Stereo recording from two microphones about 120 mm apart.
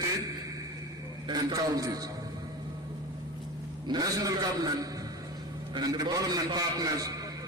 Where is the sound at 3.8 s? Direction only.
35° right (ahead or behind).